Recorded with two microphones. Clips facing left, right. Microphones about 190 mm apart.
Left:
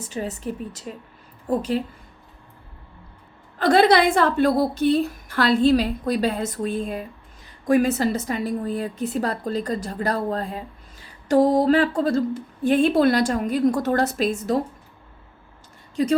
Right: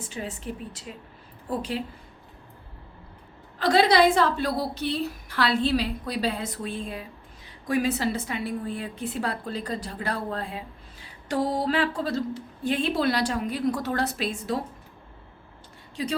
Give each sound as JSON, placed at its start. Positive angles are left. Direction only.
{"t": 0.0, "sound": "a woman's voice", "side_deg": 40}
{"t": 3.6, "sound": "a woman's voice", "side_deg": 50}
{"t": 16.0, "sound": "a woman's voice", "side_deg": 45}